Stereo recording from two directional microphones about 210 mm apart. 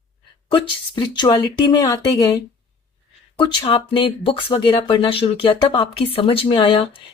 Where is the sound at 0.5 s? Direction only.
25° left (ahead or behind).